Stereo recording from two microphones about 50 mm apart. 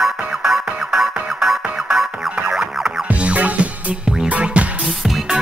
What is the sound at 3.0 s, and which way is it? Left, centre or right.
Music, right.